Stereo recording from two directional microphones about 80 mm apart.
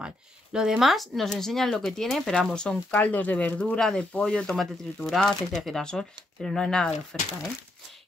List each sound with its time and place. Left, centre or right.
0.0 s speech: centre
2.9 s speech: centre